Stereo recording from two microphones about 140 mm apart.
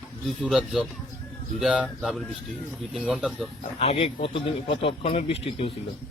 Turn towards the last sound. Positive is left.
turn(degrees=45)  # may be behind; listen again after turning